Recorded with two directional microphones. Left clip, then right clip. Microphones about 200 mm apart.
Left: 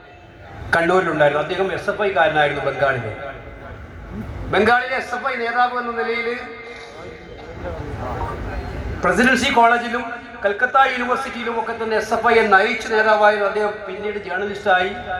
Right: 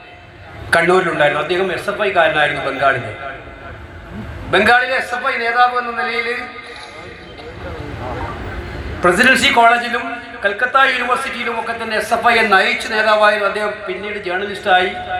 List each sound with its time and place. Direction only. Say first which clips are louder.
0.7 s a man's voice: right 4 dB; 30° right (ahead or behind)
4.5 s a man's voice: right 4 dB; 30° right (ahead or behind)
9.0 s a man's voice: right 5 dB; 30° right (ahead or behind)